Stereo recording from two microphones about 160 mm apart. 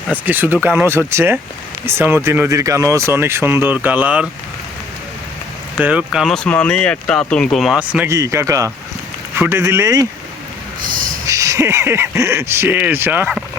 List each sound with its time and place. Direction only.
0.1 s speech: 10° right (ahead or behind)
5.8 s speech: 5° right (ahead or behind)
8.1 s a man's voice: 20° right (ahead or behind)
11.3 s speech: 20° right (ahead or behind)